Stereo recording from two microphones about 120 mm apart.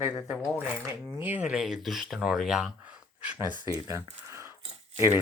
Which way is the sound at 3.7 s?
25° right (ahead or behind).